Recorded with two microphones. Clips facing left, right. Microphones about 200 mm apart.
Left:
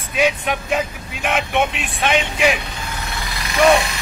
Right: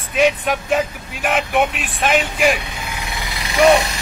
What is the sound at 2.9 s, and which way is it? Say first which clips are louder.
Vehicle: even; 15° right (ahead or behind).